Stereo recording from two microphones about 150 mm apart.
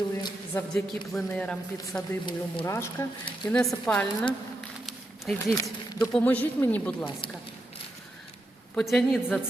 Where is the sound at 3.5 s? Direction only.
5° left (ahead or behind).